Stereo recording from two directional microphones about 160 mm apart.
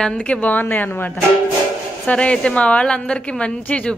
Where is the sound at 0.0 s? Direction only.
5° left (ahead or behind).